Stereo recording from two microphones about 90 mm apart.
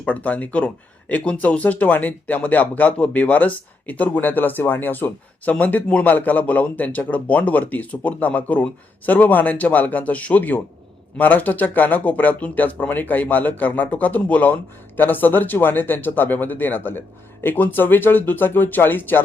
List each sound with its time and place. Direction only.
0.0 s speech: 15° left (ahead or behind)